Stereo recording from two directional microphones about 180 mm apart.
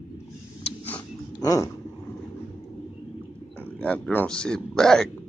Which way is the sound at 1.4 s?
15° left (ahead or behind).